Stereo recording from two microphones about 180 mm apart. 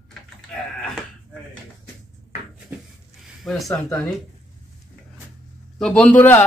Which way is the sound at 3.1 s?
Centre (ahead or behind).